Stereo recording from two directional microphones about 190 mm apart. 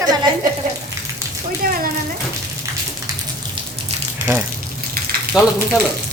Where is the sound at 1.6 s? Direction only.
50° right (ahead or behind).